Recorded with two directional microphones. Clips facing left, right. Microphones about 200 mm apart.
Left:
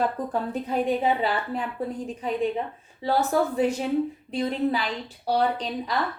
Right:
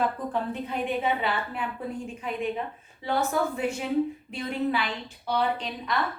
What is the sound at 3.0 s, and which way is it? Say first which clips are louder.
A woman's voice: left 3 dB; 35° left (ahead or behind).